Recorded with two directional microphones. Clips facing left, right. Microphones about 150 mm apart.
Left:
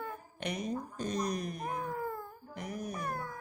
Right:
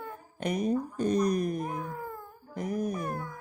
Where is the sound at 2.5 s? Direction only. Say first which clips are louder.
Right 9 dB; 45° right (ahead or behind).